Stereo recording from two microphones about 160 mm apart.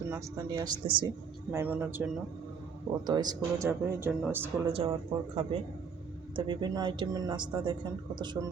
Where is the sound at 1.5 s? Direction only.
10° right (ahead or behind).